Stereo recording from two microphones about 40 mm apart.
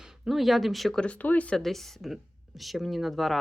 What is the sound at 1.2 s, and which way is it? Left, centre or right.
Speech, left.